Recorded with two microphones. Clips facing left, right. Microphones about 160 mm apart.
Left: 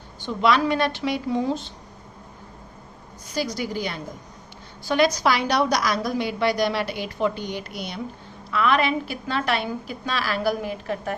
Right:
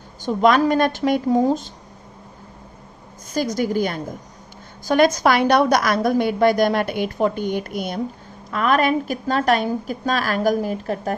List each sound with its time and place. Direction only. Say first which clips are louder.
0.2 s a woman's voice: right 5 dB; 45° right (ahead or behind)
3.2 s a woman's voice: right 6 dB; 45° right (ahead or behind)